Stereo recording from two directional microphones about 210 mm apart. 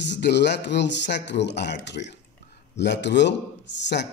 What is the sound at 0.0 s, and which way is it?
Speech, 55° left (ahead or behind).